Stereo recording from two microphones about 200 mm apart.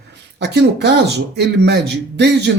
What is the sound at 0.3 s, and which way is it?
Speech, 60° right (ahead or behind).